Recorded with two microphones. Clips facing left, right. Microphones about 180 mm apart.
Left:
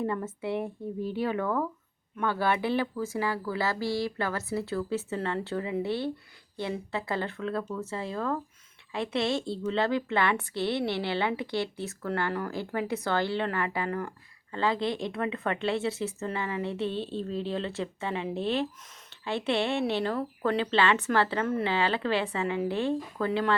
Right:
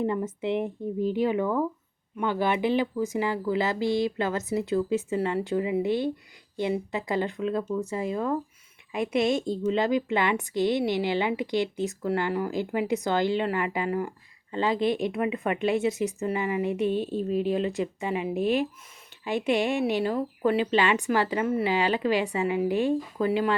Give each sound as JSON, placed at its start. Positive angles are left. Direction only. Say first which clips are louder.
{"t": 0.0, "sound": "a woman's voice", "louder": "right 4 dB", "side_deg": -20}
{"t": 19.1, "sound": "a sound", "louder": "right 2 dB", "side_deg": -15}
{"t": 19.5, "sound": "a woman's voice", "louder": "right 3 dB", "side_deg": -15}